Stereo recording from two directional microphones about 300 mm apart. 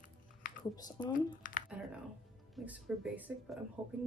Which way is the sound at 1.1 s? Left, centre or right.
Left.